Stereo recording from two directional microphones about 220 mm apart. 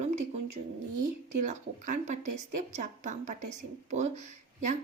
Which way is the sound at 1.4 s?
35° right (ahead or behind).